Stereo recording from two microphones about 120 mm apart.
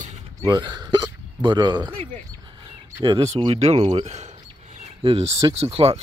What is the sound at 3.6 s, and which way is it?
Speech, 65° right (ahead or behind).